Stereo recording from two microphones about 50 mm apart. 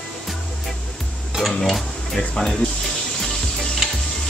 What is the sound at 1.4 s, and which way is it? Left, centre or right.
Speech, centre.